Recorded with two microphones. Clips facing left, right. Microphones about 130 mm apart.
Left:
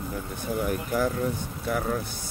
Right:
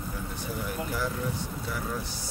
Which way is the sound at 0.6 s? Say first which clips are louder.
Left 6 dB; 50° left (ahead or behind).